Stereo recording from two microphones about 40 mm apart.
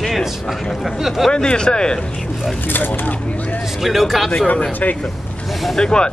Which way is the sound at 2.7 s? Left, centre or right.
Left.